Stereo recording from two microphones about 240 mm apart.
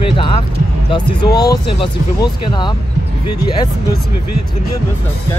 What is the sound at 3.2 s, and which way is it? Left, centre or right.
Speech, left.